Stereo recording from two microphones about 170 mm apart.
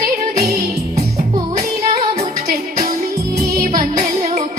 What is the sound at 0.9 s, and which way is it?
Music, 40° right (ahead or behind).